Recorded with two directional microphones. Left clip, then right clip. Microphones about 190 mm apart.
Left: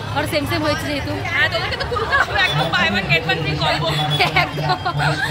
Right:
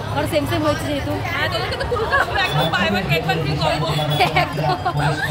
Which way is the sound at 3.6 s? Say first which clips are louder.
Left 1 dB; 5° left (ahead or behind).